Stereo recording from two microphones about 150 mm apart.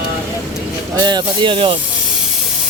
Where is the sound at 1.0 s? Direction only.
30° right (ahead or behind).